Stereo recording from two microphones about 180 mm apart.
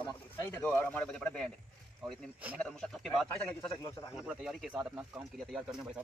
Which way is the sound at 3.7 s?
20° left (ahead or behind).